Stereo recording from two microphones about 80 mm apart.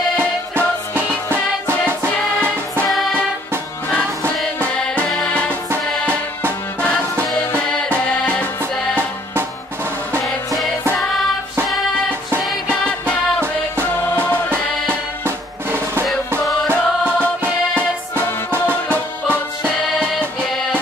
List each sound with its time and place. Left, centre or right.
0.2 s music: right
2.9 s music: centre
5.5 s music: right
8.9 s music: right
10.2 s music: centre
14.5 s music: right